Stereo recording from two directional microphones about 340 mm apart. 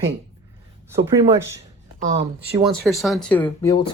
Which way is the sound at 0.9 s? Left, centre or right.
Centre.